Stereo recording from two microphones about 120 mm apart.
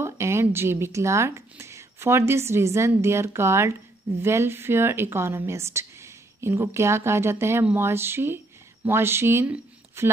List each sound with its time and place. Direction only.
0.0 s speech: 20° right (ahead or behind)